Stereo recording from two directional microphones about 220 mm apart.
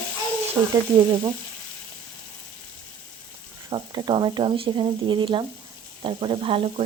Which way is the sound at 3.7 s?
20° right (ahead or behind).